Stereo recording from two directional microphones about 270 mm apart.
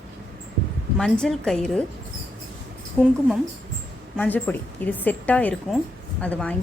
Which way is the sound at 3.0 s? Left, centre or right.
Centre.